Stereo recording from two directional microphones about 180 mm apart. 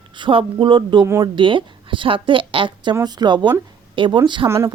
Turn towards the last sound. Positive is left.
turn(degrees=-15)  # may be behind; listen again after turning